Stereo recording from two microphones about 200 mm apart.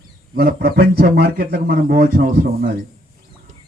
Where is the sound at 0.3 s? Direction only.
50° right (ahead or behind).